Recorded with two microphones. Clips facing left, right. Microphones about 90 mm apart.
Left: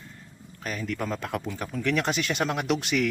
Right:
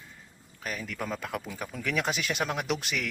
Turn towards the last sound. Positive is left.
turn(degrees=0)  # may be behind; listen again after turning